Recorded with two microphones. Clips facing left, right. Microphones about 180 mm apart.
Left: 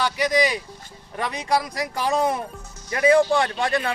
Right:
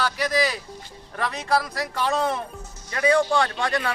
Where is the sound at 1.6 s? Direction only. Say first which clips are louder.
Left 1 dB; 15° left (ahead or behind).